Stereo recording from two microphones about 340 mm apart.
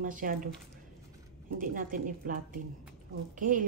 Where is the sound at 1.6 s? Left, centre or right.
Right.